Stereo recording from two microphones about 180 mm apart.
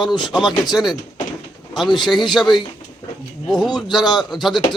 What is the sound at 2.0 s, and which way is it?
Speech, centre (ahead or behind).